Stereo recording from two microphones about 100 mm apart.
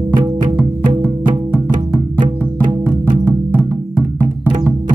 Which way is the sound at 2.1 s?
50° right (ahead or behind).